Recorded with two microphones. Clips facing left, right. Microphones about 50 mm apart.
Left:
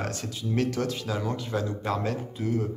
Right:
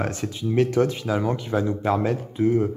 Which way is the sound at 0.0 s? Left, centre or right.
Right.